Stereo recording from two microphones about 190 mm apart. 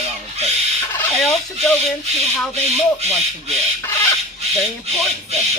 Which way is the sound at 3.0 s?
35° right (ahead or behind).